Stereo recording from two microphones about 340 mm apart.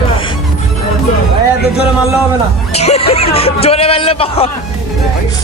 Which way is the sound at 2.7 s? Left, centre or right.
Centre.